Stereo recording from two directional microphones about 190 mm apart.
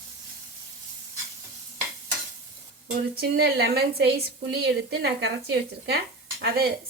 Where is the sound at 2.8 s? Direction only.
55° right (ahead or behind).